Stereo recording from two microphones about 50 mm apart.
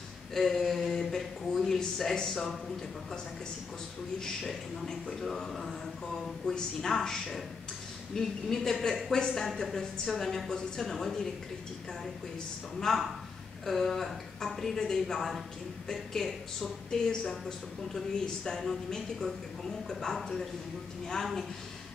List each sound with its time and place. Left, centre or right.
0.3 s speech: centre
4.2 s a woman's voice: centre
12.9 s a woman's voice: centre